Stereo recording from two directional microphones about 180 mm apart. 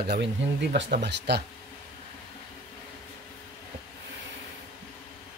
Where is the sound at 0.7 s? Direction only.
75° right (ahead or behind).